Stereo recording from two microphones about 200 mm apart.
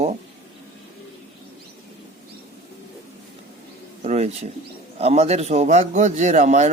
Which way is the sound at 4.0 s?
30° right (ahead or behind).